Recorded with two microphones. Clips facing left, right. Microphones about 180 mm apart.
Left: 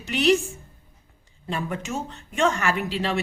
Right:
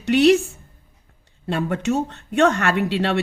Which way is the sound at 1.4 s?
65° right (ahead or behind).